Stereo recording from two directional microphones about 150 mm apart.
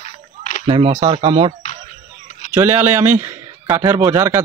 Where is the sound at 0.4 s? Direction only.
55° left (ahead or behind).